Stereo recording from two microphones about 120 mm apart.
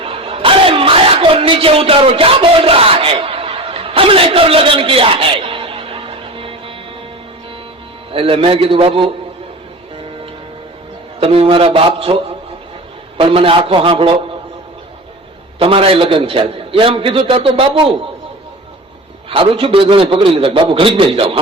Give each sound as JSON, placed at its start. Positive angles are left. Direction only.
{"t": 0.0, "sound": "music", "side_deg": -50}
{"t": 8.1, "sound": "a man's voice", "side_deg": -50}
{"t": 11.2, "sound": "a man's voice", "side_deg": -55}
{"t": 15.5, "sound": "a man's voice", "side_deg": -50}
{"t": 19.3, "sound": "a man's voice", "side_deg": -50}